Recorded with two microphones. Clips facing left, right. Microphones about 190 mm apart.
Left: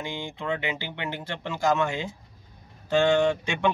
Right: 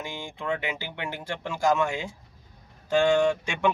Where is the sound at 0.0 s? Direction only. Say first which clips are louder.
Left 2 dB; 20° left (ahead or behind).